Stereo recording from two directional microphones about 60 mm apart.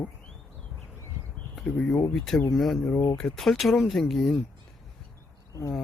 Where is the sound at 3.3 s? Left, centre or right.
Centre.